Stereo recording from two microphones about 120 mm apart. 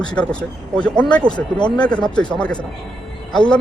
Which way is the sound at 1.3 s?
40° left (ahead or behind).